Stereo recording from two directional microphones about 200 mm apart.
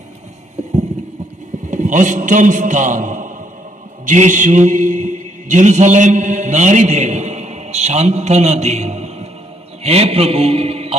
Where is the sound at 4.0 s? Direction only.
40° right (ahead or behind).